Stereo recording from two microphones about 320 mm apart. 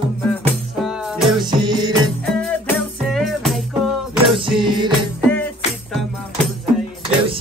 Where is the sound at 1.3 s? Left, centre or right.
Centre.